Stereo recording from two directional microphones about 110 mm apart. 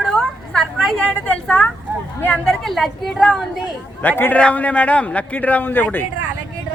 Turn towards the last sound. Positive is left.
turn(degrees=15)  # may be behind; listen again after turning